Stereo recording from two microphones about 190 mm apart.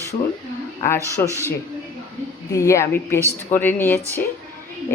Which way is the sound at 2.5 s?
15° left (ahead or behind).